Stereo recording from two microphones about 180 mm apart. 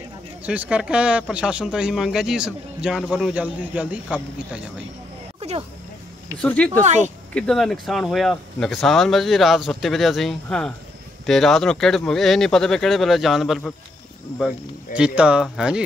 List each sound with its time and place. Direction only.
0.4 s a man's voice: 5° right (ahead or behind)
5.4 s a sound: 40° right (ahead or behind)
6.4 s speech: 5° left (ahead or behind)
6.8 s speech: 40° right (ahead or behind)
7.3 s a man's voice: centre (ahead or behind)
15.0 s a man's voice: 5° right (ahead or behind)